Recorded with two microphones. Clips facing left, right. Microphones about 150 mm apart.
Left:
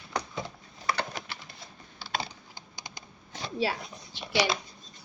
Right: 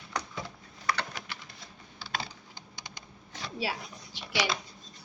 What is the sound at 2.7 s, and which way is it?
Computer keyboard, 10° left (ahead or behind).